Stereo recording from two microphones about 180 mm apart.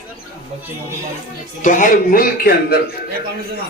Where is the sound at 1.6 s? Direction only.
45° left (ahead or behind).